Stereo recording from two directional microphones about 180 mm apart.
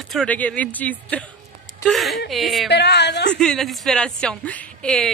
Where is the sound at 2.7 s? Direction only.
70° left (ahead or behind).